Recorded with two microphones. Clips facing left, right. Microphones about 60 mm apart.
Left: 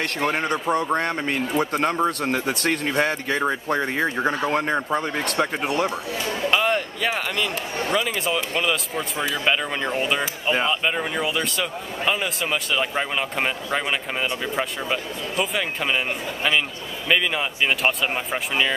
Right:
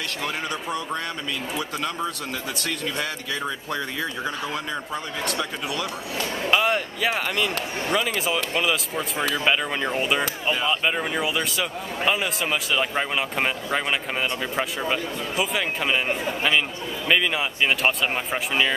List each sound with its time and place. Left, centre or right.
0.2 s speech: left
6.5 s a man's voice: centre